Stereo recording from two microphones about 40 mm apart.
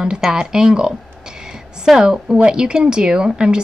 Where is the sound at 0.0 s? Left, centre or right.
Centre.